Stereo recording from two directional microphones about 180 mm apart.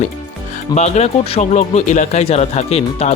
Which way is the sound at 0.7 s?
35° left (ahead or behind).